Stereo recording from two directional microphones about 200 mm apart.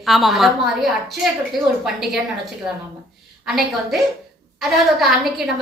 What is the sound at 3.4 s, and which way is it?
A woman's voice, centre (ahead or behind).